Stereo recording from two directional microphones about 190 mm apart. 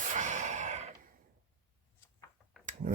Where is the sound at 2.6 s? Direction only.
40° right (ahead or behind).